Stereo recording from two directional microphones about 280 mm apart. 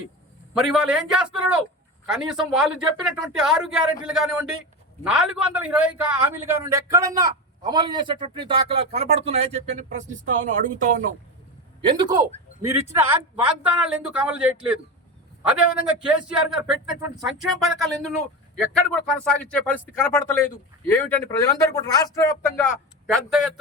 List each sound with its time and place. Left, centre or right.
0.5 s a man's voice: centre; by 11.1 s right
11.8 s a man's voice: centre
23.1 s a man's voice: centre